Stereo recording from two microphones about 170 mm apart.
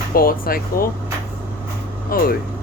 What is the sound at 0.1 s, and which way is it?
Speech, 60° left (ahead or behind).